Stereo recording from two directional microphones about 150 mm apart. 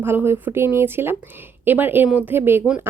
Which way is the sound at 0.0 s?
15° right (ahead or behind).